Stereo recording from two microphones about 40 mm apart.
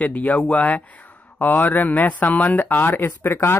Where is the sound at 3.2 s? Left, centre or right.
Left.